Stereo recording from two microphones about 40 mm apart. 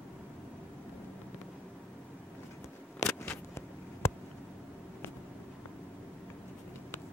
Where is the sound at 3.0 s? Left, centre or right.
Left.